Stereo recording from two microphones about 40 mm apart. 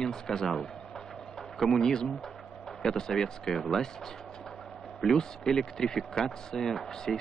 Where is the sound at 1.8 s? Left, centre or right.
Centre.